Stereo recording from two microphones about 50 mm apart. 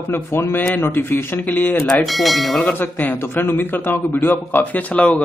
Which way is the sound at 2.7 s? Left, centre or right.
Left.